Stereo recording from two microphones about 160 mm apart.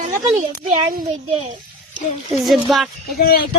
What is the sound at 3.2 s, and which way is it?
Speech, 70° left (ahead or behind).